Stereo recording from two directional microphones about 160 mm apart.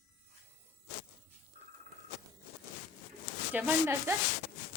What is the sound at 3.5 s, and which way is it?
Speech, 10° right (ahead or behind).